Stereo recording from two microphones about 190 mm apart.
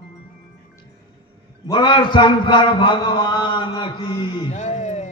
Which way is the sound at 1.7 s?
25° left (ahead or behind).